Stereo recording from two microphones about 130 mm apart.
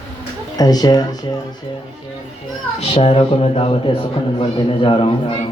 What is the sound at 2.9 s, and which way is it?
Speech, 45° left (ahead or behind).